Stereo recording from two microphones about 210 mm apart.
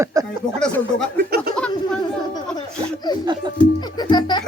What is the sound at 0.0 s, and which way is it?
Speech, 15° right (ahead or behind).